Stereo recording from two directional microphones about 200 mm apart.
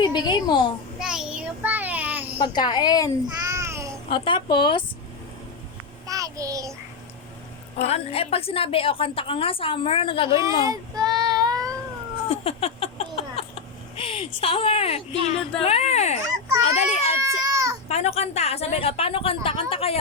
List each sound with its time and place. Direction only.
0.0 s a woman's voice: 20° left (ahead or behind)
0.9 s child singing: 5° right (ahead or behind)
2.4 s a woman's voice: 20° left (ahead or behind)
3.4 s babbling: 15° right (ahead or behind)
4.1 s a woman's voice: 25° left (ahead or behind)
6.1 s child singing: 15° right (ahead or behind)
7.8 s a woman's voice: 30° left (ahead or behind)
10.6 s child singing: 20° right (ahead or behind)
12.3 s a sound: 30° left (ahead or behind)
13.9 s a woman's voice: 25° left (ahead or behind)
17.2 s a sound: 15° right (ahead or behind)
17.8 s a woman's voice: 30° left (ahead or behind)